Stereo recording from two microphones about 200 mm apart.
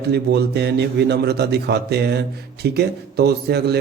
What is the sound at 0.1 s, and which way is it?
Speech, 55° right (ahead or behind).